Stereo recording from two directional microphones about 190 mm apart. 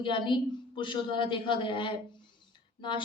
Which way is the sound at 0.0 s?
25° left (ahead or behind).